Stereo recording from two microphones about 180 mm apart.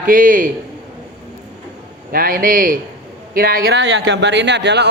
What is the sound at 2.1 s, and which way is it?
A man's voice, 50° right (ahead or behind).